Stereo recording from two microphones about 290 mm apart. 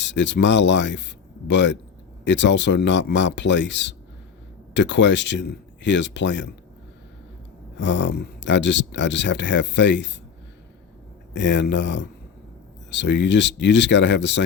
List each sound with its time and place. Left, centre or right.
0.0 s speech: left
7.8 s speech: left
11.3 s speech: left